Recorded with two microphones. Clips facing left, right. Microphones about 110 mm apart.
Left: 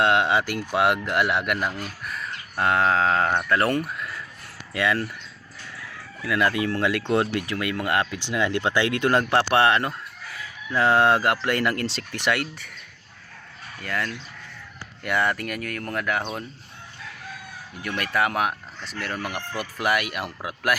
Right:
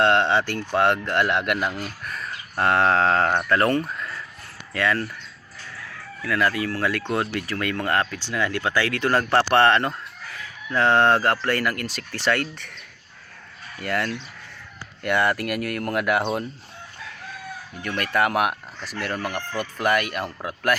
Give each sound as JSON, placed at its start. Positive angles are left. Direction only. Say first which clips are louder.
{"t": 0.0, "sound": "speech", "louder": "right 1 dB", "side_deg": 10}
{"t": 6.2, "sound": "speech", "louder": "even", "side_deg": 20}
{"t": 12.1, "sound": "speech", "louder": "right 3 dB", "side_deg": 15}
{"t": 13.8, "sound": "speech", "louder": "right 4 dB", "side_deg": -5}
{"t": 17.8, "sound": "speech", "louder": "right 2 dB", "side_deg": 5}